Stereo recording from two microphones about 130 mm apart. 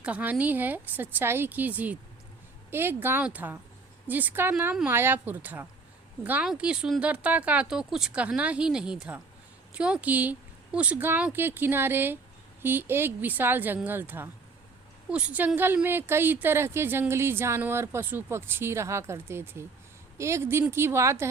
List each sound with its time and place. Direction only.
0.0 s speech: 10° right (ahead or behind)